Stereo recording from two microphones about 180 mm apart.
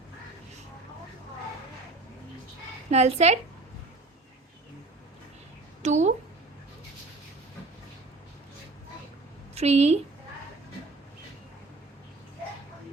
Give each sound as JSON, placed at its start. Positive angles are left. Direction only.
{"t": 2.9, "sound": "a woman's voice", "side_deg": -35}
{"t": 5.8, "sound": "a sound", "side_deg": -40}
{"t": 9.6, "sound": "a woman's voice", "side_deg": -35}